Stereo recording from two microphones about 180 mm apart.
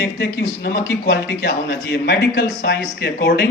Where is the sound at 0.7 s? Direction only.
15° left (ahead or behind).